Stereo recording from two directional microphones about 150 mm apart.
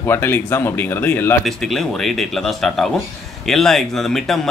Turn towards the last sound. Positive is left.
turn(degrees=0)  # may be behind; listen again after turning